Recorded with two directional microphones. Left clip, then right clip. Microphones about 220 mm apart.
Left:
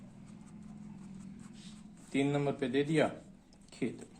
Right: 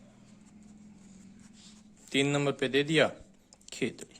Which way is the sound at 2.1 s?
40° right (ahead or behind).